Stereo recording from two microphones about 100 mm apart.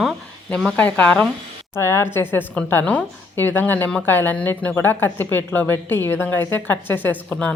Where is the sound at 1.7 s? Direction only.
25° left (ahead or behind).